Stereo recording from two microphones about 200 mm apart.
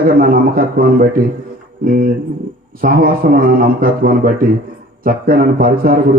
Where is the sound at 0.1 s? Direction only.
45° right (ahead or behind).